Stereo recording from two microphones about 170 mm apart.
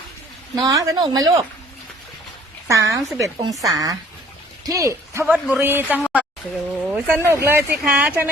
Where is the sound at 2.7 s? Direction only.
20° right (ahead or behind).